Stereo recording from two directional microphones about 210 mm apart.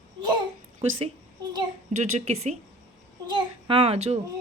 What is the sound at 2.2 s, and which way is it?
A child's voice, 30° right (ahead or behind).